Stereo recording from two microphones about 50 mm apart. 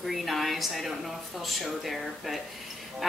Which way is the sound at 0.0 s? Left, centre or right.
Centre.